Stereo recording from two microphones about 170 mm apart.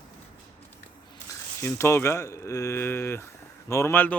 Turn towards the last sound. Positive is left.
turn(degrees=10)  # may be behind; listen again after turning